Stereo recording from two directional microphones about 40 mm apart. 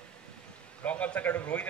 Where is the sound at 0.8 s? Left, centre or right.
Left.